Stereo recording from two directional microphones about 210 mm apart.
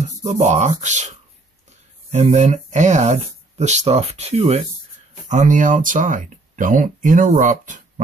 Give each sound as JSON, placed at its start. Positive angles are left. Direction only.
{"t": 0.2, "sound": "speech", "side_deg": -35}
{"t": 2.1, "sound": "speech", "side_deg": -35}